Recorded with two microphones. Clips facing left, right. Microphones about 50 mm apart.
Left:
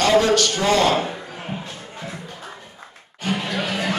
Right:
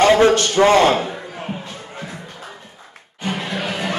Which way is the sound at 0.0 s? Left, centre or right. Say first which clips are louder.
Right 4 dB; right.